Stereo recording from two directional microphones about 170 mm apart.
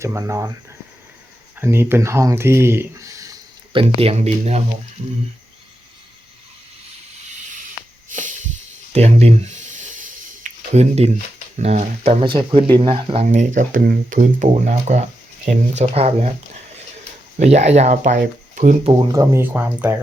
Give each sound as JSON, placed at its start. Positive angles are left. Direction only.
{"t": 0.0, "sound": "speech", "side_deg": -15}
{"t": 1.5, "sound": "speech", "side_deg": -15}
{"t": 3.7, "sound": "speech", "side_deg": -30}
{"t": 8.1, "sound": "a sound", "side_deg": -50}
{"t": 8.9, "sound": "a sound", "side_deg": -40}
{"t": 11.5, "sound": "speech", "side_deg": -40}
{"t": 13.2, "sound": "speech", "side_deg": -50}
{"t": 17.3, "sound": "speech", "side_deg": -40}
{"t": 18.9, "sound": "speech", "side_deg": -25}